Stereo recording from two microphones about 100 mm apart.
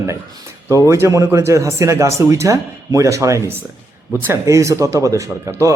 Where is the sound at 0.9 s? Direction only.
30° right (ahead or behind).